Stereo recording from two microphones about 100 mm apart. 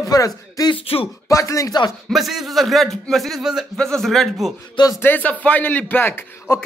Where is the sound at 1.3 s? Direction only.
30° left (ahead or behind).